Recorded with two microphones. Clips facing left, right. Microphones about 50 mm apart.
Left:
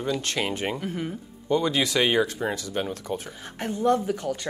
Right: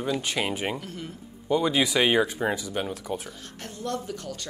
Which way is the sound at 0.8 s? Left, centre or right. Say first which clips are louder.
Left 7 dB; centre.